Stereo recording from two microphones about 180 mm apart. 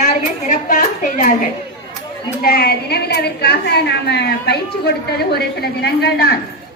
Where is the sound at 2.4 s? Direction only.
55° left (ahead or behind).